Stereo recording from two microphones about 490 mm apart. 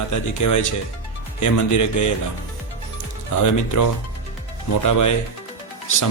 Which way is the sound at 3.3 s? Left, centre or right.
Left.